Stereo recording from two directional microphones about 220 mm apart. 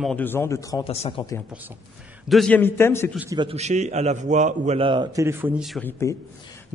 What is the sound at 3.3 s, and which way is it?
A man's voice, 25° right (ahead or behind).